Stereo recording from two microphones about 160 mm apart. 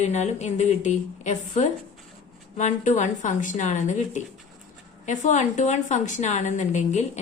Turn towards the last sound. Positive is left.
turn(degrees=45)  # may be behind; listen again after turning